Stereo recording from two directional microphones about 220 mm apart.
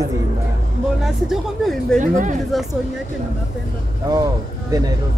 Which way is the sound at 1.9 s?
35° right (ahead or behind).